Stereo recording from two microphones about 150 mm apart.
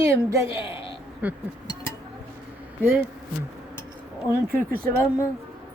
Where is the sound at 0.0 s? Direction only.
20° right (ahead or behind).